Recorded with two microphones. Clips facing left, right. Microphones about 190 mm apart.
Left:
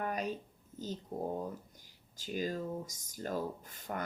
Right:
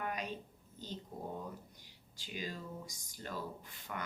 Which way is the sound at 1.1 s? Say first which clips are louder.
Left 8 dB; 50° left (ahead or behind).